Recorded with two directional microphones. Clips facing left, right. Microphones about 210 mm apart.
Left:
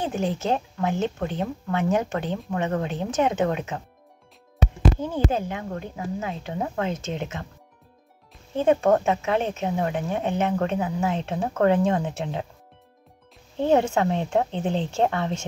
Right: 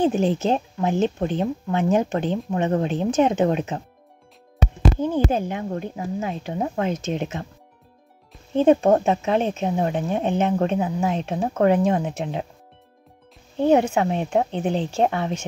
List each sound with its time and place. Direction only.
0.0 s speech: 20° right (ahead or behind)
5.0 s speech: 20° right (ahead or behind)
8.5 s speech: 20° right (ahead or behind)
13.9 s speech: 15° right (ahead or behind)